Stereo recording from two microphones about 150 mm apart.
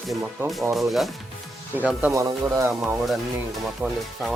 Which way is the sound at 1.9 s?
10° right (ahead or behind).